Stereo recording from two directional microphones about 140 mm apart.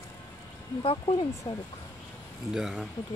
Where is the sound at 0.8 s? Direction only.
40° left (ahead or behind).